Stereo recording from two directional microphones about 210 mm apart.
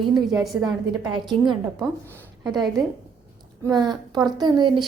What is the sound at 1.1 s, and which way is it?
Speech, 20° right (ahead or behind).